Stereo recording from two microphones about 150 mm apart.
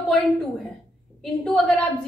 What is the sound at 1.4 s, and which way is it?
Speech, 5° left (ahead or behind).